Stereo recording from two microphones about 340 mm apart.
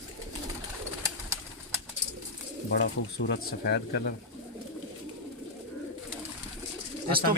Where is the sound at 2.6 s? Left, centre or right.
Left.